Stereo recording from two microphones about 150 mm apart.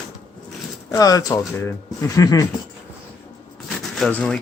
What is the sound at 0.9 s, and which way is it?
Speech, 25° left (ahead or behind).